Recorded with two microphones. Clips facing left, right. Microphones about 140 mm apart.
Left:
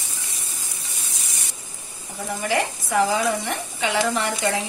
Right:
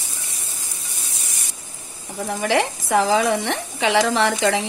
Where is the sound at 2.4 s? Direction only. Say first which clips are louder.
Right 4 dB; 90° right.